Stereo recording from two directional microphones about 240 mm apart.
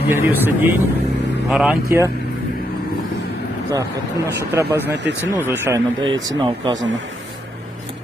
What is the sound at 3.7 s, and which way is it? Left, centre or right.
Speech, centre.